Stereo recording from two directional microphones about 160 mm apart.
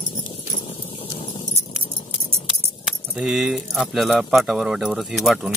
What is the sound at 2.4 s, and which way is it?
Speech, 5° right (ahead or behind).